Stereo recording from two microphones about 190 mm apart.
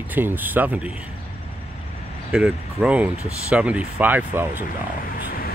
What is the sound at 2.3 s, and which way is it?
Speech, 5° right (ahead or behind).